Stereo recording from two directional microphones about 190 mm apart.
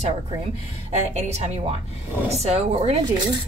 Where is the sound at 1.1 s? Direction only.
35° right (ahead or behind).